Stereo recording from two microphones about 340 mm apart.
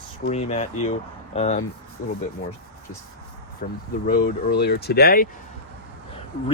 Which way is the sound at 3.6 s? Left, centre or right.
Left.